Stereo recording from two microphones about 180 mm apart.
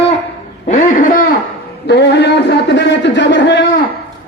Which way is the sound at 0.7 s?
45° left (ahead or behind).